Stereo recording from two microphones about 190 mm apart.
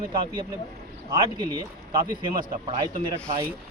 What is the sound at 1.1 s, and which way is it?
Speech, 25° right (ahead or behind).